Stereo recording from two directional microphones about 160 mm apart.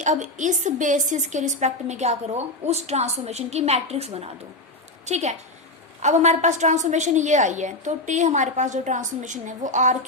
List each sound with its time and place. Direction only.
0.0 s a woman's voice: 50° right (ahead or behind)